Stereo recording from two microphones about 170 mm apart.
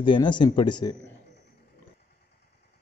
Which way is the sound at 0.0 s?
30° left (ahead or behind).